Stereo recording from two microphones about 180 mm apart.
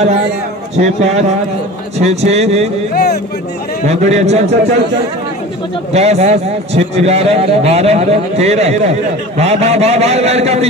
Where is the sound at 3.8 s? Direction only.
40° right (ahead or behind).